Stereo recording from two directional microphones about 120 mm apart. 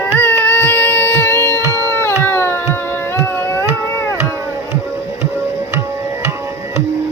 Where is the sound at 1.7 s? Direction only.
20° left (ahead or behind).